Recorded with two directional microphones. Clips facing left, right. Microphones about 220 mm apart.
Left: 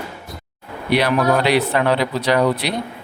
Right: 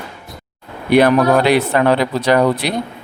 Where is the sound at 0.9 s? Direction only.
50° right (ahead or behind).